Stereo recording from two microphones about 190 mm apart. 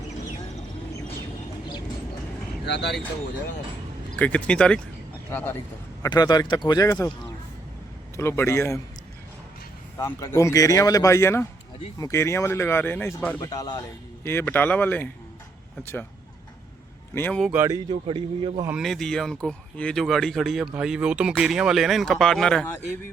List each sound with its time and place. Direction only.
2.6 s speech: 65° left (ahead or behind)
4.2 s speech: 5° left (ahead or behind)
6.0 s speech: 20° left (ahead or behind)
8.1 s speech: 15° left (ahead or behind)
10.0 s speech: 15° left (ahead or behind)
17.2 s speech: 10° left (ahead or behind)
17.4 s speech: 10° right (ahead or behind); by 18.6 s 25° right (ahead or behind)
18.8 s speech: centre (ahead or behind)